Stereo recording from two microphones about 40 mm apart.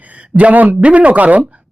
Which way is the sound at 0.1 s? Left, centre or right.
Right.